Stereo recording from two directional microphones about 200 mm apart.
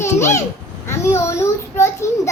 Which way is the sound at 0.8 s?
15° left (ahead or behind).